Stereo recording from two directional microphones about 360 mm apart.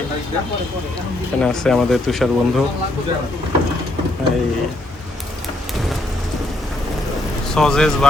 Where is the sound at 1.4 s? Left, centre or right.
Centre.